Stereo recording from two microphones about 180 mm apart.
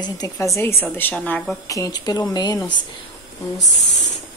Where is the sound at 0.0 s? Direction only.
20° left (ahead or behind).